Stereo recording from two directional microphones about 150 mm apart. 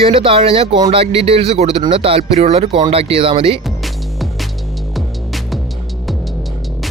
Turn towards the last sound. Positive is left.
turn(degrees=0)  # may be behind; listen again after turning